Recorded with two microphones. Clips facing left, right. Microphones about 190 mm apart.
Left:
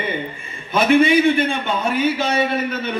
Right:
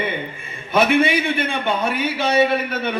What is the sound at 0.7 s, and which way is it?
A man's voice, 60° right (ahead or behind).